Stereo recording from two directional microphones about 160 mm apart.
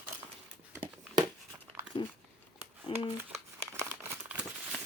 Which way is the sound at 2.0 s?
30° left (ahead or behind).